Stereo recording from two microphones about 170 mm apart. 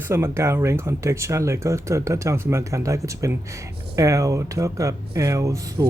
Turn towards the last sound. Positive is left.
turn(degrees=-20)  # may be behind; listen again after turning